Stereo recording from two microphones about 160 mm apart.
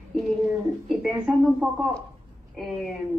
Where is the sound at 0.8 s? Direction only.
Centre (ahead or behind).